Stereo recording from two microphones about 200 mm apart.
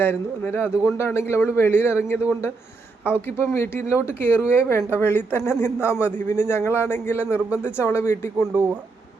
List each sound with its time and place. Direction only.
0.0 s a man's voice: 10° left (ahead or behind)
7.3 s speech: 5° right (ahead or behind)
7.8 s a man's voice: 10° left (ahead or behind)